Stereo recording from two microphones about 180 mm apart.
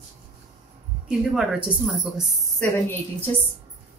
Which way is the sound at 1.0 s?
5° right (ahead or behind).